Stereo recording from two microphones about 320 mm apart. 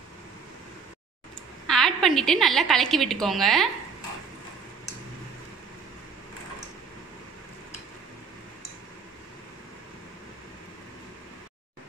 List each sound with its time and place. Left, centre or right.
1.7 s a woman's voice: centre